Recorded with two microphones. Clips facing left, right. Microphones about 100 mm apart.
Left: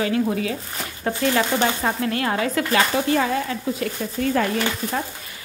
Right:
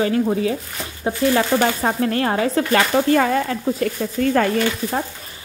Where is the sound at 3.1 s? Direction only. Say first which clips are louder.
Right 4 dB; 50° right (ahead or behind).